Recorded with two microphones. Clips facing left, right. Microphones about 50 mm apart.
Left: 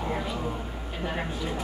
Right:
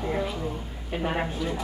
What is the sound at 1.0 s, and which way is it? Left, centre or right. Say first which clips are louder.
Speech: right 4 dB; right.